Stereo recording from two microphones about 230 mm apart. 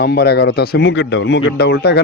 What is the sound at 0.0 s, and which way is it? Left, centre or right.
Speech, left.